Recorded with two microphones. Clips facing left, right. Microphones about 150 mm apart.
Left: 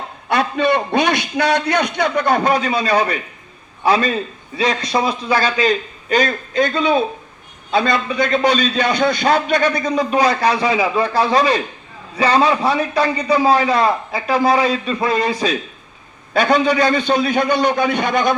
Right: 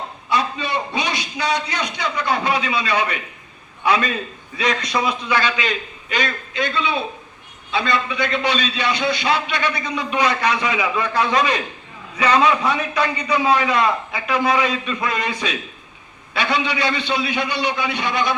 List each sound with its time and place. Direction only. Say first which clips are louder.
0.3 s a man's voice: left 6 dB; 55° left (ahead or behind); by 15.5 s 35° left (ahead or behind)
16.3 s a man's voice: left 7 dB; 45° left (ahead or behind)